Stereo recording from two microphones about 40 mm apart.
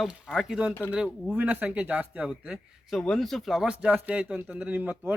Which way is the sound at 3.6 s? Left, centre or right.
Right.